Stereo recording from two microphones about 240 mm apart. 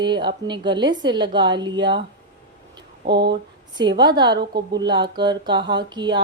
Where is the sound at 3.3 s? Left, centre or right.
Centre.